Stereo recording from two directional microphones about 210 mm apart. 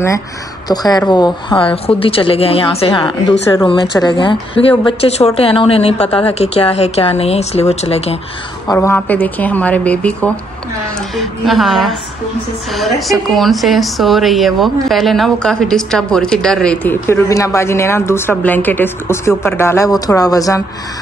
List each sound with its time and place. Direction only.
0.7 s speech: 20° left (ahead or behind)
8.6 s a woman's voice: 10° left (ahead or behind)